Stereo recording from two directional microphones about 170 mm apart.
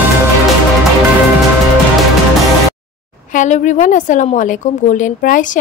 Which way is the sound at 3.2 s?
45° left (ahead or behind).